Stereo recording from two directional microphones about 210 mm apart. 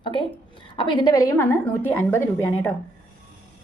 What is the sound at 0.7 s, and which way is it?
Speech, 20° left (ahead or behind).